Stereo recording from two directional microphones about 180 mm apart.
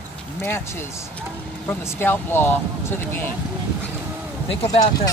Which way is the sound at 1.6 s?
10° left (ahead or behind).